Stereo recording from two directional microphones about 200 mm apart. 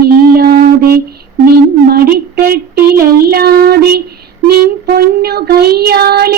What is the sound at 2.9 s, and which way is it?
Child singing, 50° right (ahead or behind).